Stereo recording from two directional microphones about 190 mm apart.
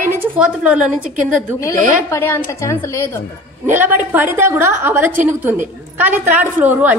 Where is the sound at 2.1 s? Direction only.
10° left (ahead or behind).